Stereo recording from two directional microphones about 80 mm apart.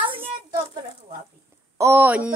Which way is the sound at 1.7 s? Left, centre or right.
Right.